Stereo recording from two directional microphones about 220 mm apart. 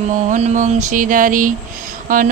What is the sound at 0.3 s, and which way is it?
Mantra, 35° right (ahead or behind).